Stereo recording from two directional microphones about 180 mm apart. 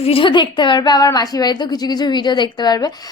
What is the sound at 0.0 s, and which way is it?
A woman's voice, 30° left (ahead or behind).